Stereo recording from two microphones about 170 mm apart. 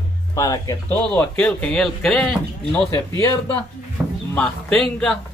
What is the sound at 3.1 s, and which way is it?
Speech, 20° left (ahead or behind).